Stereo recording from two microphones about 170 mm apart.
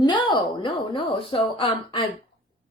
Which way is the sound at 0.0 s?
25° left (ahead or behind).